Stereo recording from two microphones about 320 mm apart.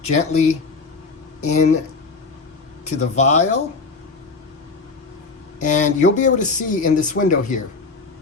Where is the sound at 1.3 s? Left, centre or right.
Left.